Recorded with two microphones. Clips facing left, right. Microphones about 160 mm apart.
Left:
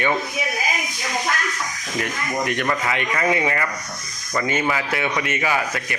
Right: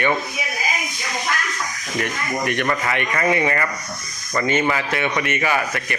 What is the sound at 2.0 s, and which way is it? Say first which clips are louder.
Speech: right 1 dB; 15° left (ahead or behind).